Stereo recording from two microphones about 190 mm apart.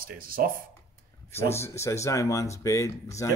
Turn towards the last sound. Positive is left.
turn(degrees=15)  # may be behind; listen again after turning